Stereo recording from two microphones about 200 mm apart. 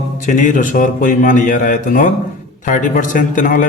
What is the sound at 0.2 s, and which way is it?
A man's voice, 40° left (ahead or behind).